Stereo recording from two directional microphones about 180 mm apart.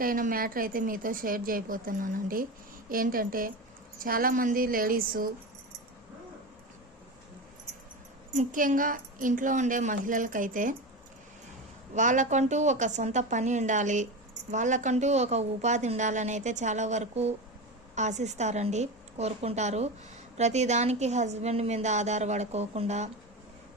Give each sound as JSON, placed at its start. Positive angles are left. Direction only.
{"t": 0.0, "sound": "a woman's voice", "side_deg": -50}
{"t": 8.4, "sound": "a woman's voice", "side_deg": -50}
{"t": 11.9, "sound": "a woman's voice", "side_deg": -45}